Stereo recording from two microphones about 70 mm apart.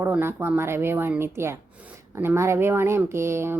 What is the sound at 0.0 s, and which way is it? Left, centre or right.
Speech, right.